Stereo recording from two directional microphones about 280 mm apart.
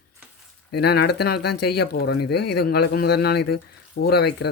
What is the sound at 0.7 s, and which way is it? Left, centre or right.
Speech, left.